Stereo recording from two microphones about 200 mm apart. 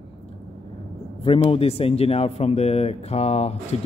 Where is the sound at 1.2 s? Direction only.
30° left (ahead or behind).